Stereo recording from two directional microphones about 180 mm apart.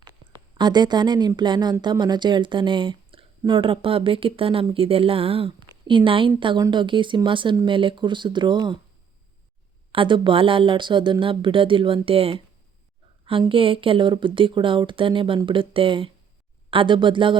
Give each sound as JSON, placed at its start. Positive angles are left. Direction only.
{"t": 0.5, "sound": "speech", "side_deg": -25}
{"t": 9.9, "sound": "speech", "side_deg": -30}